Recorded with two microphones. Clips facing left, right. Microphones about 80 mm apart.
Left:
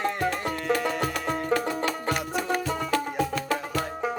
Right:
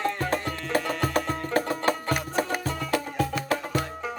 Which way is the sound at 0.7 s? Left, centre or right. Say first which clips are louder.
Right 1 dB; right.